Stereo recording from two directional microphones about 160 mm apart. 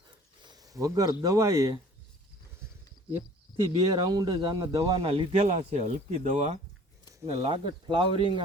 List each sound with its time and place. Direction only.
0.4 s a sound: 25° right (ahead or behind)
1.2 s speech: 20° right (ahead or behind)
3.6 s speech: 25° right (ahead or behind)
5.0 s speech: 40° right (ahead or behind)
7.3 s speech: 35° right (ahead or behind)